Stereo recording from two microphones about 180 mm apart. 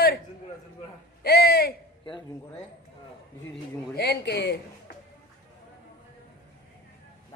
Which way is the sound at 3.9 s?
65° left (ahead or behind).